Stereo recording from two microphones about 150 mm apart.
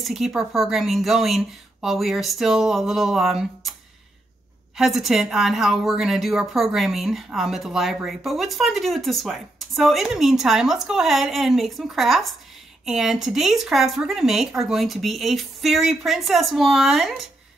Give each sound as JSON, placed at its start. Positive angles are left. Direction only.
{"t": 0.0, "sound": "a woman's voice", "side_deg": 0}
{"t": 4.7, "sound": "a woman's voice", "side_deg": 0}